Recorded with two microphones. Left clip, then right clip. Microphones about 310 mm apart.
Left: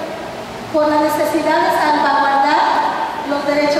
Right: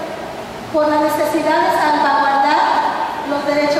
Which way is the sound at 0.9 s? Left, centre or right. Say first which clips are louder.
Even; centre.